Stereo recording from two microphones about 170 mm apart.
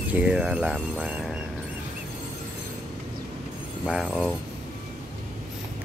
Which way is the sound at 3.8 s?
Centre (ahead or behind).